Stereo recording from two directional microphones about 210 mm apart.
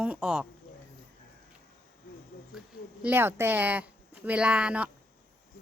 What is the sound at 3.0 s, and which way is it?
Speech, 10° right (ahead or behind).